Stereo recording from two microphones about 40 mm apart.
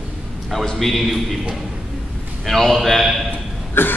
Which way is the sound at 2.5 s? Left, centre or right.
Centre.